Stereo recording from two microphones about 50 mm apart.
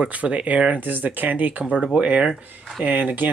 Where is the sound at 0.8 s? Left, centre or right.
Right.